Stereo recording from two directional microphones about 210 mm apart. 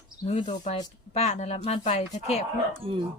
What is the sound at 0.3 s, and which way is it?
Speech, 30° left (ahead or behind).